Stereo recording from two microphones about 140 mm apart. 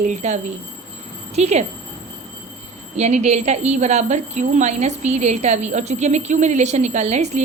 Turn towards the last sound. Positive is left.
turn(degrees=-55)  # may be behind; listen again after turning